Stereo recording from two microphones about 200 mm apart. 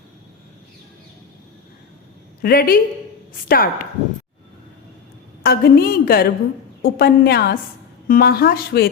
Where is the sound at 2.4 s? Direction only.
50° left (ahead or behind).